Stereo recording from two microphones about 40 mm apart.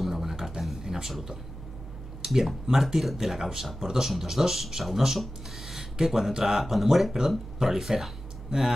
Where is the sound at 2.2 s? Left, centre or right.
Centre.